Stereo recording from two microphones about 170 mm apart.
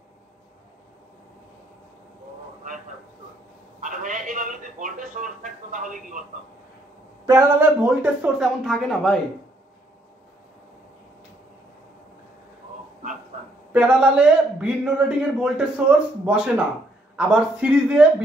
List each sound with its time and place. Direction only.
3.8 s a sound: 50° right (ahead or behind)
7.2 s speech: 15° right (ahead or behind); by 9.2 s centre (ahead or behind)
13.7 s a man's voice: 5° right (ahead or behind)